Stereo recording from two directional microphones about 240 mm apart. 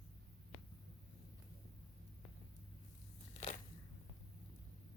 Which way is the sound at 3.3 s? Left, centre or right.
Left.